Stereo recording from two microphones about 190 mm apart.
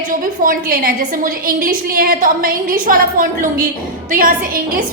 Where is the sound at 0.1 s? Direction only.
45° right (ahead or behind).